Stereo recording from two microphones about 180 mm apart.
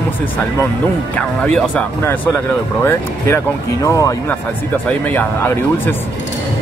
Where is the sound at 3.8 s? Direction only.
15° left (ahead or behind).